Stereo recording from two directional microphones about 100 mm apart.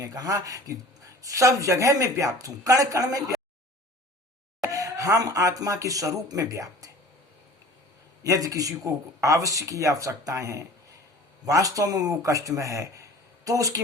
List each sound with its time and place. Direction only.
0.0 s speech: 35° right (ahead or behind)
4.6 s speech: 35° right (ahead or behind)
8.2 s speech: 35° right (ahead or behind)